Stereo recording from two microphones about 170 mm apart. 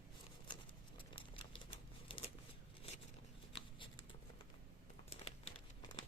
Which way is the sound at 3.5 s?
30° left (ahead or behind).